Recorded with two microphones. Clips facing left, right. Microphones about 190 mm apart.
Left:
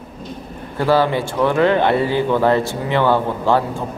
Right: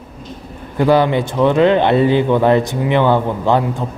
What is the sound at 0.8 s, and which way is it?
Speech, 20° right (ahead or behind).